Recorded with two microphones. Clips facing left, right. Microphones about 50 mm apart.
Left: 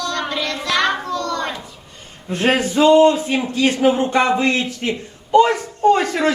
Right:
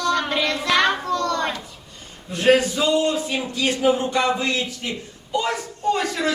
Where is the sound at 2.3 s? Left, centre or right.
Left.